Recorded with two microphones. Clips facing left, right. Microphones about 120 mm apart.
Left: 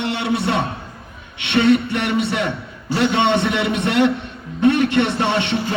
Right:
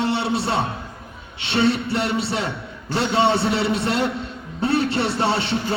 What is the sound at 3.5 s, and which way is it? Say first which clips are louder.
Speech: left 1 dB; 30° right (ahead or behind).